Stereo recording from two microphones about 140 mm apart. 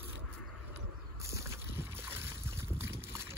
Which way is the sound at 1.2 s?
20° right (ahead or behind).